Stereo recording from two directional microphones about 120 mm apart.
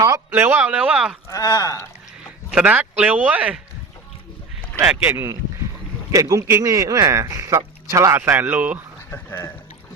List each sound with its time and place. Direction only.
0.3 s speech: 15° right (ahead or behind)
1.3 s speech: 30° left (ahead or behind)
2.5 s speech: 10° right (ahead or behind)
4.8 s speech: 20° right (ahead or behind)
9.0 s speech: 20° left (ahead or behind)